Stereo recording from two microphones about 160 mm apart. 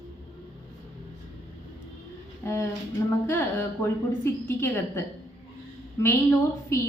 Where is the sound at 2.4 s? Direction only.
15° left (ahead or behind).